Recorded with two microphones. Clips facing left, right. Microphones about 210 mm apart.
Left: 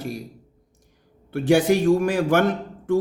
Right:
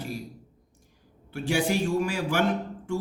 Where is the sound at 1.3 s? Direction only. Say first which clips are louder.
Left 8 dB; 50° left (ahead or behind).